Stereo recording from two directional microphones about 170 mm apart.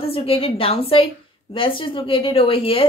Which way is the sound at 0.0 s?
35° left (ahead or behind).